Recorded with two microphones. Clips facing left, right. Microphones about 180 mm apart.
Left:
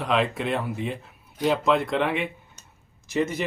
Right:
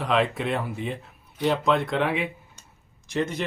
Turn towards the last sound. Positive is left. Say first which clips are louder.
# left 2 dB
turn(degrees=5)  # may be behind; listen again after turning